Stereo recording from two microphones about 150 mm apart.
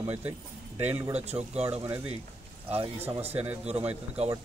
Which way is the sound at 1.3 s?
20° right (ahead or behind).